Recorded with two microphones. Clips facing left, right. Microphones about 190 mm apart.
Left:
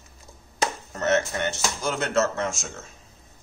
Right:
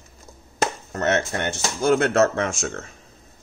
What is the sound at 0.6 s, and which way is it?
Speech, 60° right (ahead or behind).